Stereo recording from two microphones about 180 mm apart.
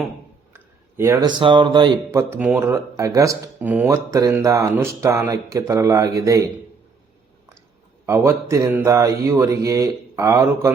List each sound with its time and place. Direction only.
0.5 s speech: 15° right (ahead or behind)
2.3 s speech: 10° right (ahead or behind)
8.0 s speech: 15° right (ahead or behind)